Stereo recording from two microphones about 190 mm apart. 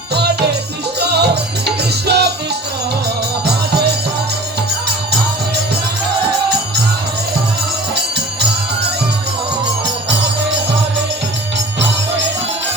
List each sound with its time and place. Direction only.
0.9 s music: 60° right (ahead or behind)
3.4 s music: 60° right (ahead or behind)